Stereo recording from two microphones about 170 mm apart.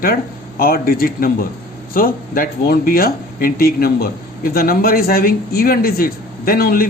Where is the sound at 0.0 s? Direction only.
60° left (ahead or behind).